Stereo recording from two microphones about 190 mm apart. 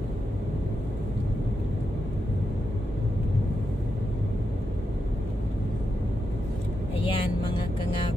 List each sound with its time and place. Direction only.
7.1 s music: 25° left (ahead or behind)